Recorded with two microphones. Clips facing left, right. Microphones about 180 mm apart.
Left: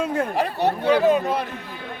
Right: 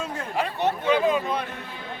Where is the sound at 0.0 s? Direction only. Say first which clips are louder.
Left 6 dB; 55° left (ahead or behind).